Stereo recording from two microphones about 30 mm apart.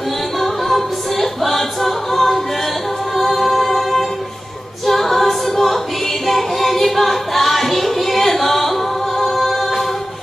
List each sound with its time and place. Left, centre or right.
0.4 s a capella: centre
6.2 s music: centre